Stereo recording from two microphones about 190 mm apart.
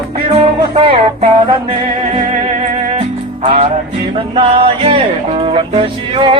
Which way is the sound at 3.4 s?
30° right (ahead or behind).